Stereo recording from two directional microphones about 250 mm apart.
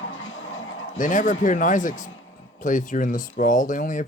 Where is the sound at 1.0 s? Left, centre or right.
Left.